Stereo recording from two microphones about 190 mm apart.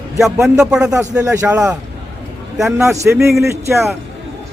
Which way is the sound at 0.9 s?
15° right (ahead or behind).